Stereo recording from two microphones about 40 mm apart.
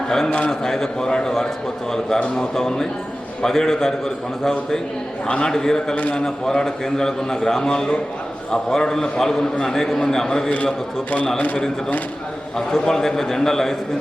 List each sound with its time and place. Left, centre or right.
0.3 s a man's voice: left
0.6 s a man's voice: centre
12.5 s a man's voice: centre